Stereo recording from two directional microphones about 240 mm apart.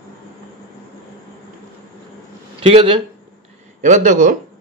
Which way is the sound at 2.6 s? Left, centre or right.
Right.